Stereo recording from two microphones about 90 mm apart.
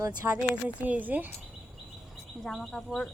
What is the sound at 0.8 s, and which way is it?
Speech, 20° right (ahead or behind).